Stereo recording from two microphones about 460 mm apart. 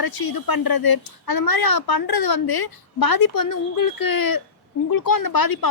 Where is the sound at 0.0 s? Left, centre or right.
Left.